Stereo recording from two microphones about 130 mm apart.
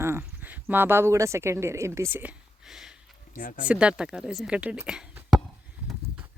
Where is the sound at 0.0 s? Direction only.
15° right (ahead or behind).